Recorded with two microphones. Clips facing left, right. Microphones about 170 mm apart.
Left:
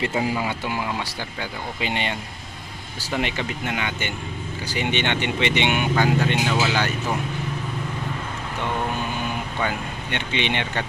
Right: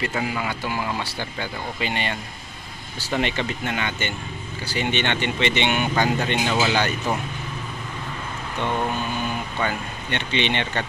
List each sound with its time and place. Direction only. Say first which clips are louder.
0.2 s speech: left 2 dB; 25° left (ahead or behind)
0.7 s speech: even; 10° left (ahead or behind)
9.6 s speech: even; 10° left (ahead or behind)